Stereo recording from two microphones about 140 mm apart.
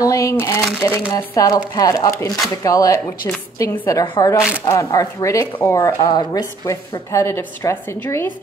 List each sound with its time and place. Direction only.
0.0 s a woman's voice: 20° left (ahead or behind)
4.0 s speech: 35° left (ahead or behind)
4.6 s a woman's voice: 20° left (ahead or behind)